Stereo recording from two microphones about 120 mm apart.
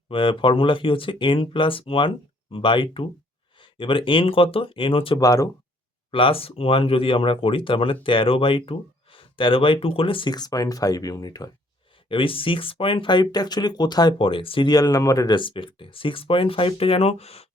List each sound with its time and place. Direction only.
0.1 s speech: 45° left (ahead or behind)
5.2 s speech: 30° left (ahead or behind)
6.1 s speech: 45° left (ahead or behind)
12.0 s speech: 45° left (ahead or behind)
14.7 s speech: 30° left (ahead or behind)
15.4 s speech: 45° left (ahead or behind)